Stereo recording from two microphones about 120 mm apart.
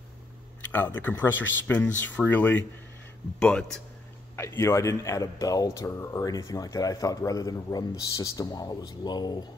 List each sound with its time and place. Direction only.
0.7 s speech: 15° left (ahead or behind)
4.4 s speech: 25° left (ahead or behind)